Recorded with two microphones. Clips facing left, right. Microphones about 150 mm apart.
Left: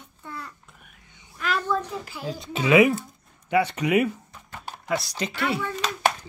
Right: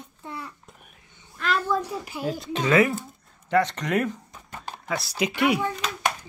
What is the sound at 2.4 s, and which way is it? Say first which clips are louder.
Speech: left 3 dB; 5° left (ahead or behind).